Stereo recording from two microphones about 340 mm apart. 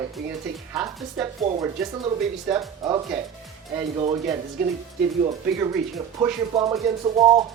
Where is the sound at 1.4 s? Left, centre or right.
Centre.